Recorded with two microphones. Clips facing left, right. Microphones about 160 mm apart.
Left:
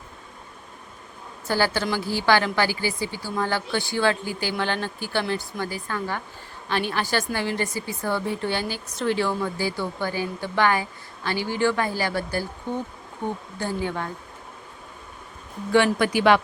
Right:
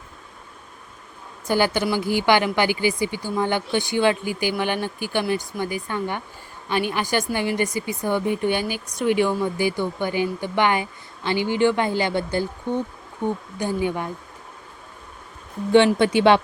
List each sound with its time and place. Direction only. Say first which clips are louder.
1.5 s a woman's voice: right 3 dB; 15° right (ahead or behind)
16.0 s speech: right 3 dB; 25° right (ahead or behind)